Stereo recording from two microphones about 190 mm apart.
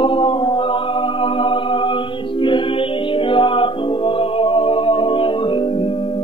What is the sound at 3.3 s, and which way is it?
Music, 25° left (ahead or behind).